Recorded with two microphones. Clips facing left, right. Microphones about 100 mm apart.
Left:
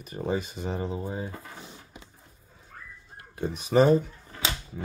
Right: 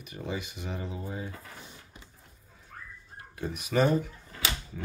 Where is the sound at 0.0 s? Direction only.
40° left (ahead or behind).